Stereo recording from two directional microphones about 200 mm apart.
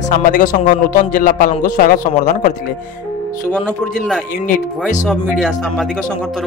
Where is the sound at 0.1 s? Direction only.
40° left (ahead or behind).